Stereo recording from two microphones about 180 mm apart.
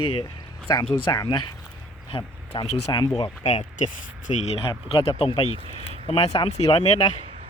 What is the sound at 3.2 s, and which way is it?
Speech, 40° left (ahead or behind).